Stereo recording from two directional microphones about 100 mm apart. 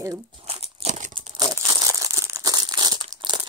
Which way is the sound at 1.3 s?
40° right (ahead or behind).